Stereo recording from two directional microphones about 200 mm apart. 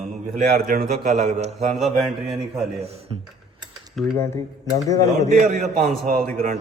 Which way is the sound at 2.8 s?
30° right (ahead or behind).